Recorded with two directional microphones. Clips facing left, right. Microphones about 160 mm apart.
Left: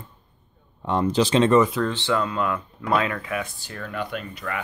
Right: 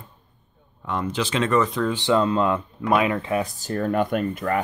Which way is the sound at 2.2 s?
25° right (ahead or behind).